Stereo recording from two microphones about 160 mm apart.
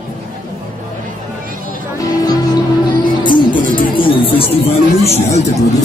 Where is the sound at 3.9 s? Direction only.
35° left (ahead or behind).